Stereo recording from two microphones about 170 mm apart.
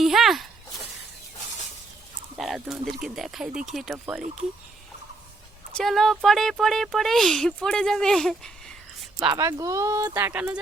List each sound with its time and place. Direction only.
0.0 s a sound: centre (ahead or behind)
2.4 s speech: centre (ahead or behind)
5.7 s speech: centre (ahead or behind)
9.2 s speech: 20° right (ahead or behind)